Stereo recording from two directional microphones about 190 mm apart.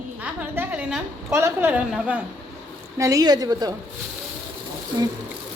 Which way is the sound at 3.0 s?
20° right (ahead or behind).